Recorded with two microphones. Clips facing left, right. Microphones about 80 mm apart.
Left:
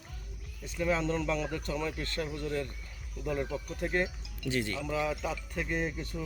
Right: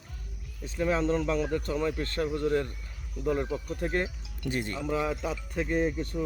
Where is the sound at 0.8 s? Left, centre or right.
Right.